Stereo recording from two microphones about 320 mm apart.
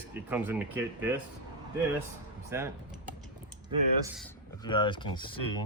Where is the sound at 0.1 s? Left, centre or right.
Centre.